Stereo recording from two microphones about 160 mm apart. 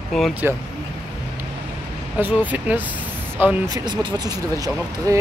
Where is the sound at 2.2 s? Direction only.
10° right (ahead or behind).